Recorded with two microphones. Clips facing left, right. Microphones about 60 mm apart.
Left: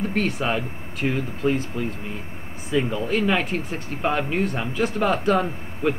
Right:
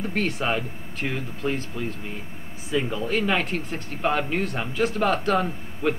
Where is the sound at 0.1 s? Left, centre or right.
Centre.